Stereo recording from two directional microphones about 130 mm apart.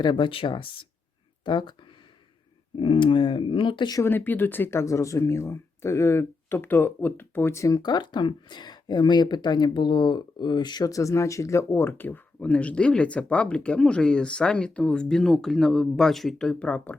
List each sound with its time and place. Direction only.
0.0 s speech: 35° left (ahead or behind)
4.0 s speech: 15° left (ahead or behind)